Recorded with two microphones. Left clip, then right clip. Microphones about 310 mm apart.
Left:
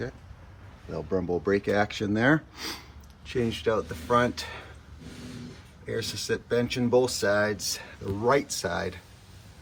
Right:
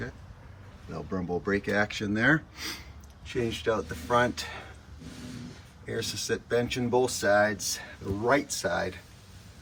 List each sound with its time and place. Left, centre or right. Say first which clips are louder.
0.9 s speech: left 4 dB; centre
5.8 s speech: left 1 dB; centre